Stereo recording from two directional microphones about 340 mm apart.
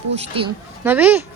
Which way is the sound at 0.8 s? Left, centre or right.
Centre.